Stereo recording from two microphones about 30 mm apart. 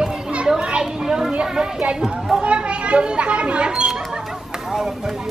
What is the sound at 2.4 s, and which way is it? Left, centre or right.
Children playing, right.